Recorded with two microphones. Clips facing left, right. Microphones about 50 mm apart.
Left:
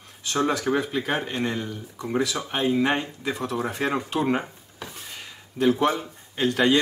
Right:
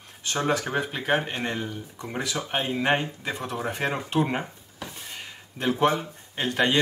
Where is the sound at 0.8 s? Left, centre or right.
Right.